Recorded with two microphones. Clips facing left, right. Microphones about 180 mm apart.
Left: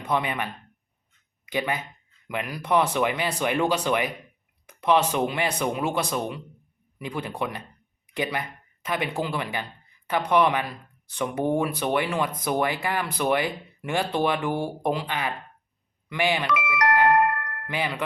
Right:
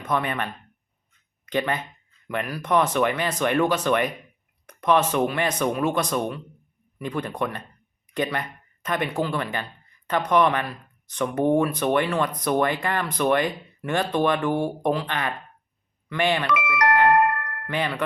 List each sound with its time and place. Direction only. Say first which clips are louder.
0.0 s speech: right 1 dB; 15° left (ahead or behind)
1.5 s speech: right 2 dB; 10° left (ahead or behind)
17.2 s chime: right 1 dB; 60° right (ahead or behind)
17.7 s speech: right 2 dB; 10° left (ahead or behind)